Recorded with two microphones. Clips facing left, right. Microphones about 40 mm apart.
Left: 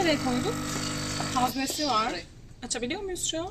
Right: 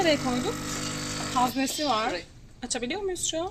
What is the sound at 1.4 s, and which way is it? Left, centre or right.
Speech, centre.